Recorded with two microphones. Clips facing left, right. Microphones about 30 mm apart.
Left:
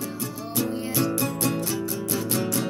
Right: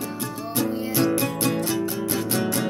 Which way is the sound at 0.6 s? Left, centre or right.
Right.